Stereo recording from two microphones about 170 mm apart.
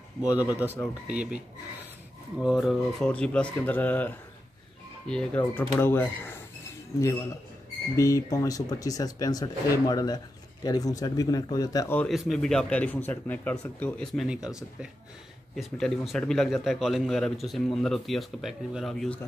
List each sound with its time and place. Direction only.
0.2 s speech: 10° right (ahead or behind)
2.4 s a man's voice: centre (ahead or behind)
7.9 s speech: 20° left (ahead or behind)
12.0 s a man's voice: centre (ahead or behind)
15.5 s a man's voice: centre (ahead or behind)